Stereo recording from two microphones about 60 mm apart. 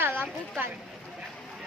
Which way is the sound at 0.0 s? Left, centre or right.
Right.